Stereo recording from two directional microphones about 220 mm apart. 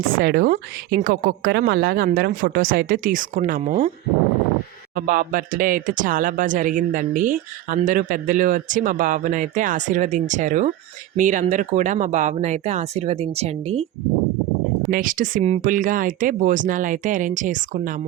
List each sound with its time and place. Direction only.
0.0 s speech: 40° right (ahead or behind)
4.9 s speech: 40° right (ahead or behind)
14.8 s speech: 40° right (ahead or behind)